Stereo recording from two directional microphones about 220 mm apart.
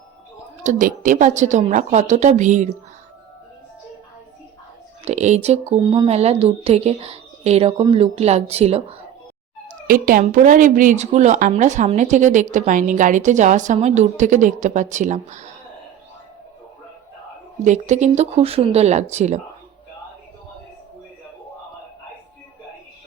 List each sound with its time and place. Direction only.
0.6 s a woman's voice: 35° right (ahead or behind)
5.0 s speech: 30° right (ahead or behind)
9.8 s a woman's voice: 40° right (ahead or behind)
17.6 s a woman's voice: 30° right (ahead or behind)